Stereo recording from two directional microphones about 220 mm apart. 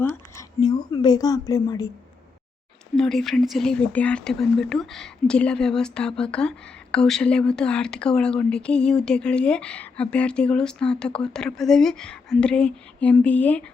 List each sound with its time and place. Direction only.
0.0 s a woman's voice: 15° left (ahead or behind)
2.9 s speech: centre (ahead or behind)